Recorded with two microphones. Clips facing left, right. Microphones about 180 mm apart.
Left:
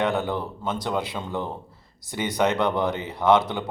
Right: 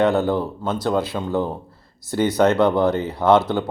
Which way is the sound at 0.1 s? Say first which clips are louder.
Right 6 dB; 5° right (ahead or behind).